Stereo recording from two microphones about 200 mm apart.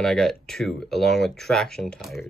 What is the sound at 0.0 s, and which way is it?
Speech, centre (ahead or behind).